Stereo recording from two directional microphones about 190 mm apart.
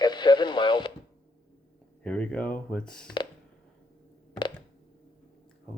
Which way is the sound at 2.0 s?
5° left (ahead or behind).